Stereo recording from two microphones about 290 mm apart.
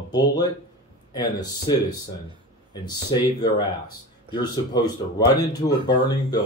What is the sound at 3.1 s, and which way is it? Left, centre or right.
Speech, centre.